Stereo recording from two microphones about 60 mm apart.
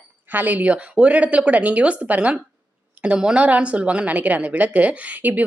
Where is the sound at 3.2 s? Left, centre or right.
Centre.